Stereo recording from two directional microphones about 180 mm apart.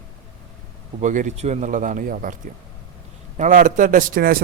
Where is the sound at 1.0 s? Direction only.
45° right (ahead or behind).